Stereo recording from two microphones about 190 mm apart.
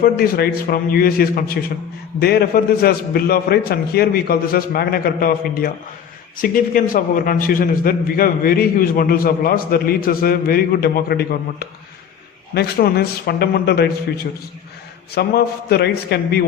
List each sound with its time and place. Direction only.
0.0 s a man's voice: 55° left (ahead or behind)
15.1 s a man's voice: 55° left (ahead or behind)